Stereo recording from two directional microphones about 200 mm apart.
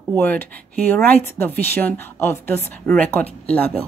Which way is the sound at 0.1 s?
10° left (ahead or behind).